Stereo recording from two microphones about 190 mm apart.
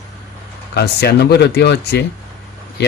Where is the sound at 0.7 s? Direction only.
60° left (ahead or behind).